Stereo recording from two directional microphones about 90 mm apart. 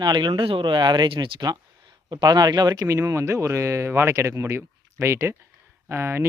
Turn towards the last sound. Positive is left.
turn(degrees=-30)  # may be behind; listen again after turning